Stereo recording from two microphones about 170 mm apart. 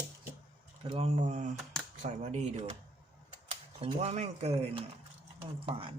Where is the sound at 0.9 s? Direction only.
35° right (ahead or behind).